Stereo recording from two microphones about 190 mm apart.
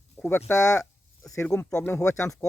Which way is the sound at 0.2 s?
10° left (ahead or behind).